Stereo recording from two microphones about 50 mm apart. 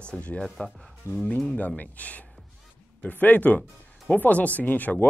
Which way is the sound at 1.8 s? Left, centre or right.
Left.